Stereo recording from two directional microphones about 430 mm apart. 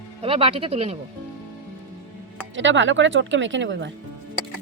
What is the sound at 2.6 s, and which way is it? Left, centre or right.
Speech, right.